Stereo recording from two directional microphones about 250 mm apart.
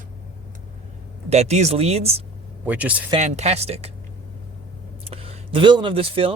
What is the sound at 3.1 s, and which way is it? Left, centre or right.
Speech, right.